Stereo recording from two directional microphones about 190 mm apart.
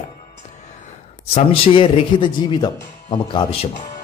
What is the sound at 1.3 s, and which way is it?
A man's voice, 30° left (ahead or behind).